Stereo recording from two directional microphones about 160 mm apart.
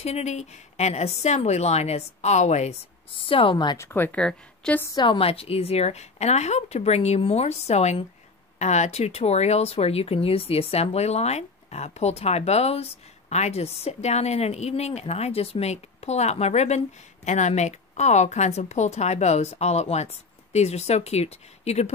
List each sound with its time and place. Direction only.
0.0 s speech: 45° left (ahead or behind)
3.2 s a woman's voice: 35° left (ahead or behind)
3.7 s speech: 15° left (ahead or behind)
4.9 s a woman's voice: 30° left (ahead or behind)